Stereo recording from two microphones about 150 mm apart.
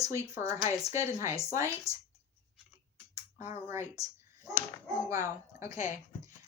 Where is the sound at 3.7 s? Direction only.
20° right (ahead or behind).